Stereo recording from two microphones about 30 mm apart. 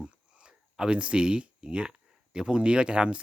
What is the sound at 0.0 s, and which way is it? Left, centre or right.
A man's voice, right.